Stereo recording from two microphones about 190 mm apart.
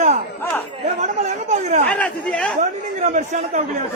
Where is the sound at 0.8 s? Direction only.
35° right (ahead or behind).